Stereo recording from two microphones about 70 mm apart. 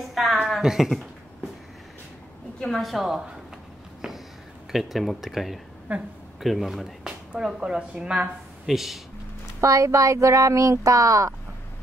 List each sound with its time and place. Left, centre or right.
0.1 s a sound: centre
2.6 s speech: centre
4.7 s speech: centre
5.9 s a woman's voice: right
6.4 s speech: centre
8.6 s speech: centre
9.6 s speech: right